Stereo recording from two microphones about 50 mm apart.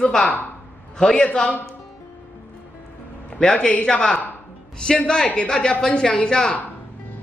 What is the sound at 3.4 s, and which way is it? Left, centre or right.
Speech, centre.